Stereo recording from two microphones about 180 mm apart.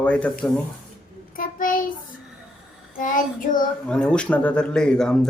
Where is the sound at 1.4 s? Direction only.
50° left (ahead or behind).